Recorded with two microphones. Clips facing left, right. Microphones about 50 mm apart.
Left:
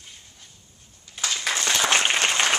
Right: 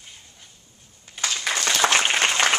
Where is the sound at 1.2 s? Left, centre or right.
Centre.